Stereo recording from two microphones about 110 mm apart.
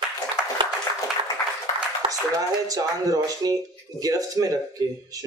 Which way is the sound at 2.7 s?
30° right (ahead or behind).